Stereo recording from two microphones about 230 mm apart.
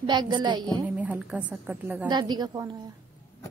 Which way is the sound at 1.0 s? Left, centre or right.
Centre.